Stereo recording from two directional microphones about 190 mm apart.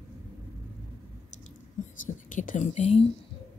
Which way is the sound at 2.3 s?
40° left (ahead or behind).